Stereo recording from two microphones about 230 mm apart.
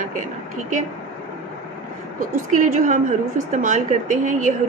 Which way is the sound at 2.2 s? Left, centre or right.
Right.